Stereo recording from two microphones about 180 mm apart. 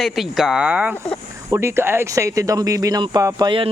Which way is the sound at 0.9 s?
5° left (ahead or behind).